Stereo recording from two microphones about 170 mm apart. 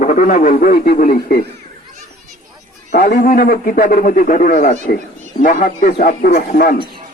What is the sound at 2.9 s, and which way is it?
Speech, 70° left (ahead or behind).